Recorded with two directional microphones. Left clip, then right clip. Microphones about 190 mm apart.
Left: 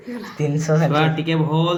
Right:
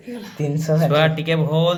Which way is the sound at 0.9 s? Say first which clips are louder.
Right 2 dB; 75° right (ahead or behind).